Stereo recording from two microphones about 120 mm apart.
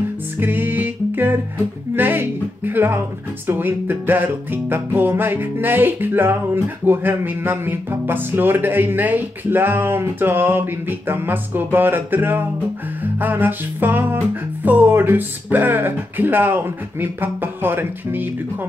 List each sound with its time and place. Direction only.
0.4 s music: 15° right (ahead or behind)
2.0 s speech: 15° right (ahead or behind)